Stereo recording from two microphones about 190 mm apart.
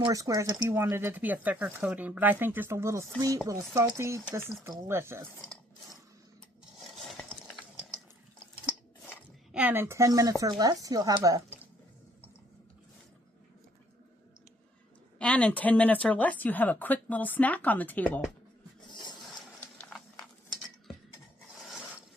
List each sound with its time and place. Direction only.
0.0 s speech: 20° right (ahead or behind)
9.5 s speech: 10° right (ahead or behind)
15.2 s speech: 5° left (ahead or behind)